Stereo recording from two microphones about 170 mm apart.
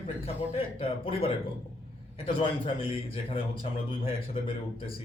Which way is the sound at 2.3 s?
30° left (ahead or behind).